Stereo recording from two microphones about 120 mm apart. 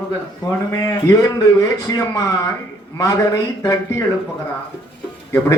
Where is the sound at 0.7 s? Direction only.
25° left (ahead or behind).